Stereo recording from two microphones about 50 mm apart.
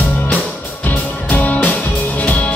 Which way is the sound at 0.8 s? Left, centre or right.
Left.